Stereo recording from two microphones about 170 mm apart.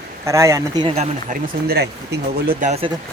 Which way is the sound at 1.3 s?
65° right (ahead or behind).